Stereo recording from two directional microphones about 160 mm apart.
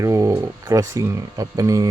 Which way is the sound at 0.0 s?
20° right (ahead or behind).